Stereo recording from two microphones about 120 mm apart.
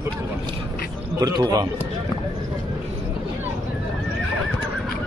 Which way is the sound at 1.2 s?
30° right (ahead or behind).